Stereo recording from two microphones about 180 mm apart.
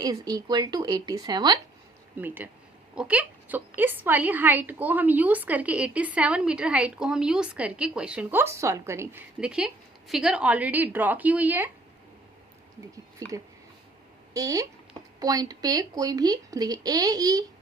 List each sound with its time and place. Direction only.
0.0 s speech: 20° right (ahead or behind)
2.2 s a woman's voice: 10° right (ahead or behind)
13.2 s speech: 20° right (ahead or behind)